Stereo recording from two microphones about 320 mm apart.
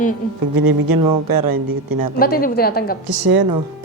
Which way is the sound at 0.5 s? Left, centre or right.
Right.